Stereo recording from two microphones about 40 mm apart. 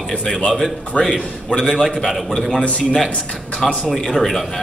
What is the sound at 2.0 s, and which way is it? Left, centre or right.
Speech, centre.